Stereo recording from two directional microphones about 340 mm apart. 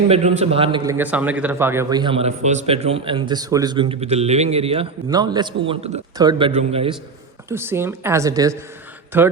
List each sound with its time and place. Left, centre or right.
0.1 s a man's voice: centre
7.5 s a man's voice: centre